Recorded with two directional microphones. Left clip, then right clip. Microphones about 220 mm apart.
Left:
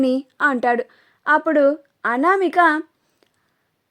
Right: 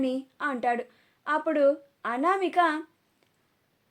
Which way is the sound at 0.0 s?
45° left (ahead or behind).